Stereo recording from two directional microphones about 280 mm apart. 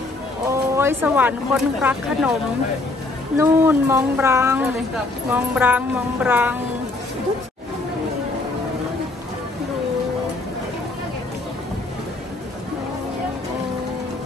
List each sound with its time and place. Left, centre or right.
0.5 s speech: centre
3.3 s speech: centre